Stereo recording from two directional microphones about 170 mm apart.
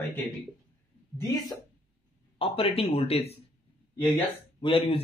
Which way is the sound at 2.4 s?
35° left (ahead or behind).